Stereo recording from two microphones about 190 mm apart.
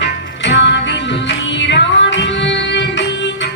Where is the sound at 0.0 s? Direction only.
70° left (ahead or behind).